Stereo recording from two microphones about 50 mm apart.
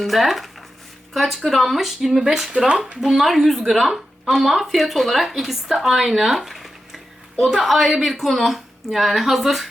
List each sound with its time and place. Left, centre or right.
0.0 s speech: centre
2.5 s speech: right
3.0 s speech: centre